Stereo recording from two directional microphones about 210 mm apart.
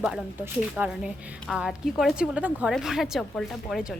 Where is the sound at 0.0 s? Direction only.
5° right (ahead or behind).